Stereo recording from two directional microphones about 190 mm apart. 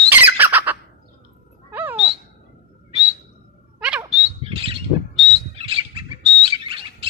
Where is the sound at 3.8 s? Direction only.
5° right (ahead or behind).